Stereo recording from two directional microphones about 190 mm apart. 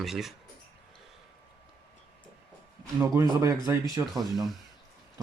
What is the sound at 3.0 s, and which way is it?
Speech, 15° right (ahead or behind).